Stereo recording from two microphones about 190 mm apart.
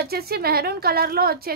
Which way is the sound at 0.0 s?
55° right (ahead or behind).